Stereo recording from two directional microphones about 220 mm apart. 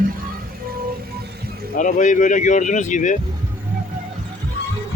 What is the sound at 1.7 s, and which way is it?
Speech, 35° left (ahead or behind).